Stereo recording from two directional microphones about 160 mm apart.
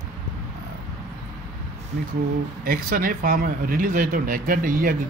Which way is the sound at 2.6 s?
65° right (ahead or behind).